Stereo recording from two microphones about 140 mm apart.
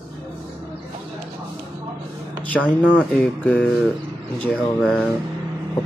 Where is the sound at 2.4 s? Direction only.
10° left (ahead or behind).